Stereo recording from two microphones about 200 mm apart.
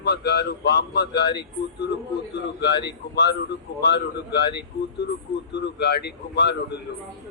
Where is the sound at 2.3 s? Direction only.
55° left (ahead or behind).